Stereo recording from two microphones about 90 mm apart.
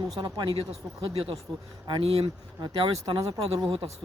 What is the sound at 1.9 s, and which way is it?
Speech, 90° right.